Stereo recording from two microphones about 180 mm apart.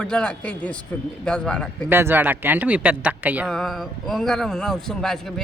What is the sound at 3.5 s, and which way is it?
A man's voice, centre (ahead or behind).